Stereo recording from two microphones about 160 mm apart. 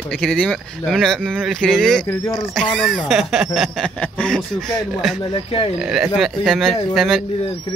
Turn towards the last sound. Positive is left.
turn(degrees=0)  # may be behind; listen again after turning